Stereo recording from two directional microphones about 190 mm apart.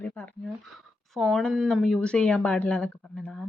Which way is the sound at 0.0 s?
10° left (ahead or behind).